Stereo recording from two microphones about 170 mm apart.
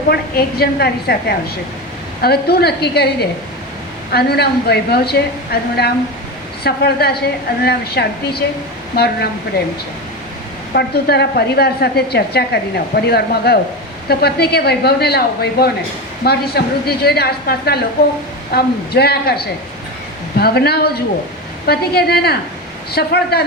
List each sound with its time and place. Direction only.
0.1 s a woman's voice: 65° left (ahead or behind)
10.8 s a woman's voice: 75° left (ahead or behind)